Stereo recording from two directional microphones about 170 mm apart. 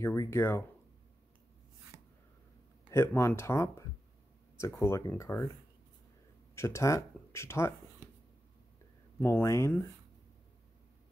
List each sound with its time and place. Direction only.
0.0 s speech: 15° left (ahead or behind)
1.9 s a sound: 15° right (ahead or behind)
2.9 s speech: 15° left (ahead or behind)
6.5 s speech: 15° left (ahead or behind)
9.2 s speech: 15° left (ahead or behind)